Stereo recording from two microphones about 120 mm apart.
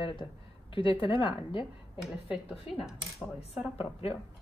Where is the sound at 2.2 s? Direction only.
5° right (ahead or behind).